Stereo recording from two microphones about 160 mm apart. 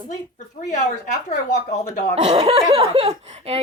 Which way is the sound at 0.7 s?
50° left (ahead or behind).